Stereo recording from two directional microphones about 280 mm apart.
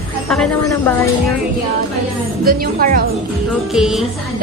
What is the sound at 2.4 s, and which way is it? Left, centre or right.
Speech, right.